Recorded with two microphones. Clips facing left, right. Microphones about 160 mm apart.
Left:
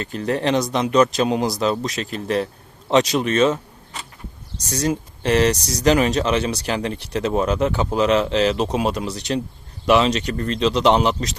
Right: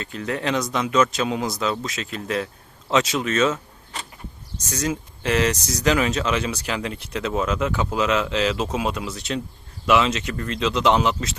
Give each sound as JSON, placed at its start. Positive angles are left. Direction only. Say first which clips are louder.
{"t": 0.2, "sound": "speech", "louder": "left 4 dB", "side_deg": 35}